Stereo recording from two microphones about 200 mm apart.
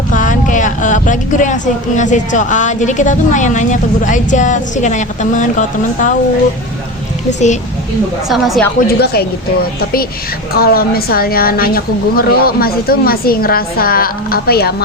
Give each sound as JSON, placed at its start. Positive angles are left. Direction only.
{"t": 0.1, "sound": "a woman's voice", "side_deg": 40}
{"t": 7.3, "sound": "a woman's voice", "side_deg": 35}
{"t": 8.3, "sound": "a woman's voice", "side_deg": 0}
{"t": 8.9, "sound": "a woman's voice", "side_deg": 50}
{"t": 10.5, "sound": "a woman's voice", "side_deg": 50}